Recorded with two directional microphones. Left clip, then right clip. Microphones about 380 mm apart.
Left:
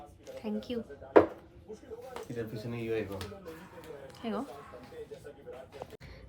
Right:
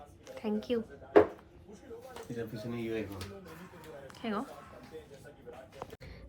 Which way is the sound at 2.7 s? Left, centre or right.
Centre.